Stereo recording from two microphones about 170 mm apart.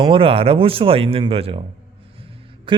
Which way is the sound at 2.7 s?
30° right (ahead or behind).